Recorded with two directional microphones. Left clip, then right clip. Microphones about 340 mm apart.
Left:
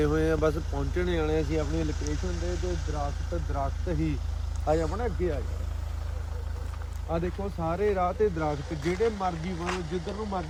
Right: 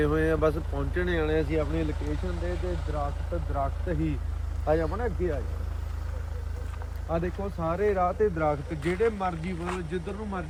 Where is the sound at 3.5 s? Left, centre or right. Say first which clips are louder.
Right 2 dB; centre.